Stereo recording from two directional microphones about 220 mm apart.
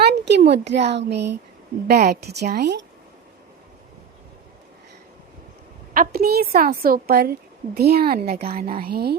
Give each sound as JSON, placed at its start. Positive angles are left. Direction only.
{"t": 0.3, "sound": "a woman's voice", "side_deg": -50}
{"t": 5.9, "sound": "a woman's voice", "side_deg": -40}